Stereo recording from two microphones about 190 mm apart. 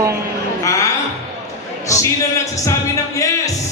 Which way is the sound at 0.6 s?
15° left (ahead or behind).